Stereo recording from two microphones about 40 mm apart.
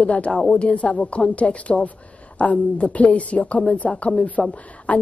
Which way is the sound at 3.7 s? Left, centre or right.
Left.